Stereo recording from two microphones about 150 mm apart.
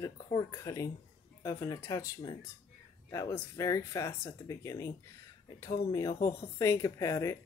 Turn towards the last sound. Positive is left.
turn(degrees=20)  # may be behind; listen again after turning